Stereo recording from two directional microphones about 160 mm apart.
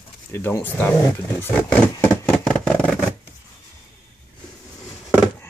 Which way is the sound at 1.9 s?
15° left (ahead or behind).